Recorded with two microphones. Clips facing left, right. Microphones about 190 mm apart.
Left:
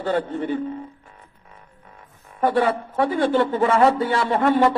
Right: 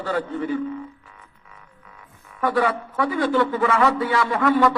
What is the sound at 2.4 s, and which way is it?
A man's voice, 30° left (ahead or behind).